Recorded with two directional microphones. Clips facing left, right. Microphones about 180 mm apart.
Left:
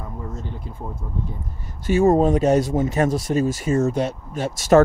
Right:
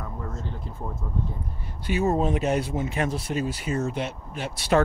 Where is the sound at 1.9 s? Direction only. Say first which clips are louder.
Left 7 dB; 45° left (ahead or behind).